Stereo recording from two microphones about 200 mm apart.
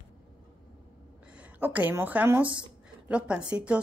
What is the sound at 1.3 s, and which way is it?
A woman's voice, 5° right (ahead or behind).